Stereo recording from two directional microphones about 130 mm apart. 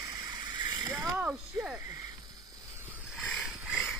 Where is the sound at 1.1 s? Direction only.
10° right (ahead or behind).